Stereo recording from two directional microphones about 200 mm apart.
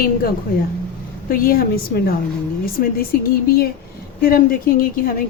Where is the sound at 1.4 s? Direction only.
45° left (ahead or behind).